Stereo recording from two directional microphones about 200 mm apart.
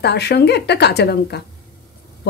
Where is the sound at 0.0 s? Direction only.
55° left (ahead or behind).